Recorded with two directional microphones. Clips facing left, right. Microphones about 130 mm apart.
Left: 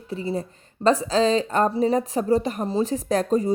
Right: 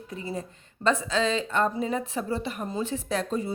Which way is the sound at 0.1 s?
30° left (ahead or behind).